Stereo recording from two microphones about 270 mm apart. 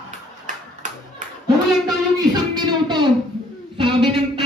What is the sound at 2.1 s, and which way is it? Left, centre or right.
Music, centre.